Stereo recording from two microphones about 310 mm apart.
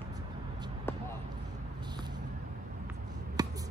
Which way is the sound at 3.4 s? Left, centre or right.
Centre.